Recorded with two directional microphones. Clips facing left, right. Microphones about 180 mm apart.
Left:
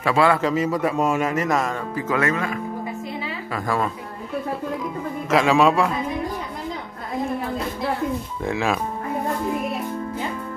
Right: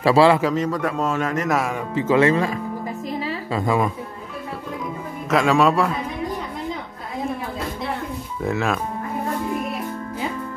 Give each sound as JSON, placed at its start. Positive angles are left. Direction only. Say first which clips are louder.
{"t": 0.0, "sound": "a man's voice", "louder": "right 4 dB", "side_deg": -30}
{"t": 0.4, "sound": "a man's voice", "louder": "even", "side_deg": 5}
{"t": 2.0, "sound": "speech", "louder": "right 6 dB", "side_deg": -25}
{"t": 3.5, "sound": "speech", "louder": "right 3 dB", "side_deg": -20}
{"t": 5.3, "sound": "a man's voice", "louder": "even", "side_deg": 0}
{"t": 8.4, "sound": "a man's voice", "louder": "right 2 dB", "side_deg": 0}